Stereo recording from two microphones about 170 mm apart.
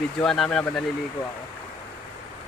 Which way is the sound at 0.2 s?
5° left (ahead or behind).